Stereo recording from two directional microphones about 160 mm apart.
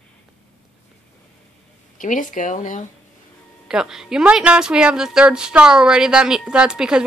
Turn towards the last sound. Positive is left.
turn(degrees=-5)  # may be behind; listen again after turning